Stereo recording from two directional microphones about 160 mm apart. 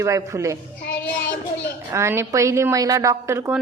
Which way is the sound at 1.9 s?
15° right (ahead or behind).